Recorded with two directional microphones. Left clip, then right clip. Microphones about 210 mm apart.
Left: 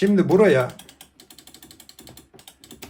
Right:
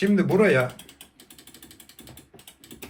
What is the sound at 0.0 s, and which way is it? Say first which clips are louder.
Speech: left 4 dB; 50° left (ahead or behind).